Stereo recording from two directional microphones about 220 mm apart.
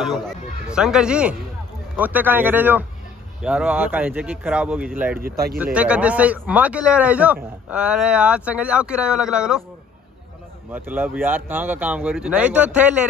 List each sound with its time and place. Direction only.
0.0 s speech: centre (ahead or behind)
5.2 s speech: 45° right (ahead or behind)
5.6 s speech: 5° right (ahead or behind)
10.7 s speech: 10° right (ahead or behind)